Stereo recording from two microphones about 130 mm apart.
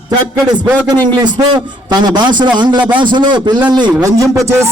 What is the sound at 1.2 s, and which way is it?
A man's voice, 35° right (ahead or behind).